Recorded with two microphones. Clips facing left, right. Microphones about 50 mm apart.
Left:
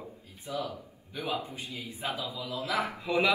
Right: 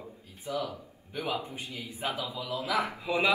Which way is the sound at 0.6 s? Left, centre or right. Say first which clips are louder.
Right 1 dB; right.